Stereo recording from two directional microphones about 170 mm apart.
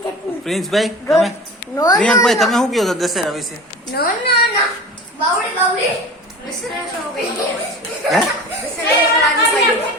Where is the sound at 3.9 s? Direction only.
70° left (ahead or behind).